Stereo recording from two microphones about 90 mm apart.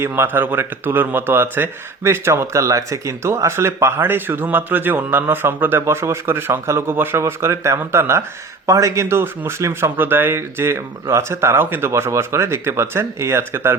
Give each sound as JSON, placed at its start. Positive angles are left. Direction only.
{"t": 0.0, "sound": "a man's voice", "side_deg": -25}